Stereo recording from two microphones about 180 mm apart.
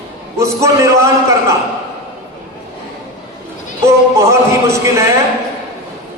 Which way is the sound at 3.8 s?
15° right (ahead or behind).